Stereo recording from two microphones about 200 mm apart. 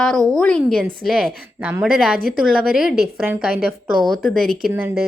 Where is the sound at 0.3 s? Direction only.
5° left (ahead or behind).